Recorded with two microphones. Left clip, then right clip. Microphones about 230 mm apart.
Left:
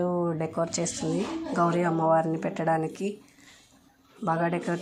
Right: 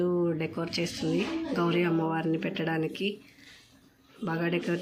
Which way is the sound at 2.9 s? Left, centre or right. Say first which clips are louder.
Right 1 dB; left.